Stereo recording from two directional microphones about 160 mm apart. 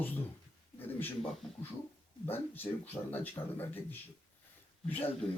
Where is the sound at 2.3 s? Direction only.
10° left (ahead or behind).